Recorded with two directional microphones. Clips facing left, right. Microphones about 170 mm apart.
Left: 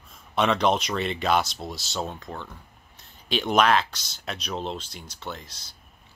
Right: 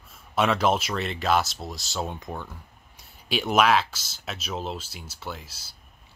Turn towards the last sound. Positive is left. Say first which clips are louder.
# even
turn(degrees=-5)  # may be behind; listen again after turning